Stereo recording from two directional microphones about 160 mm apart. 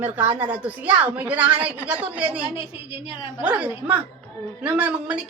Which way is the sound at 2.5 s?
35° left (ahead or behind).